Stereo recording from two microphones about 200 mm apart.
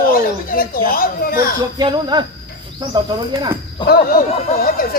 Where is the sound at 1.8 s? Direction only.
20° right (ahead or behind).